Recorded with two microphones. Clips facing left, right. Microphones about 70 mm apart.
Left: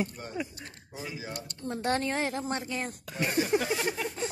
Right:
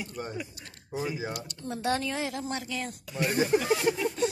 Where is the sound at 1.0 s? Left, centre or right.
Right.